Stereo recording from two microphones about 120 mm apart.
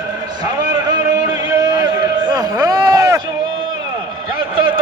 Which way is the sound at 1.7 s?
35° right (ahead or behind).